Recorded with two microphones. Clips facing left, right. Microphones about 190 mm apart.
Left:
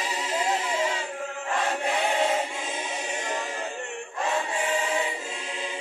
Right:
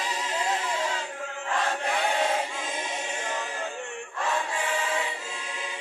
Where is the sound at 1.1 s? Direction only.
25° left (ahead or behind).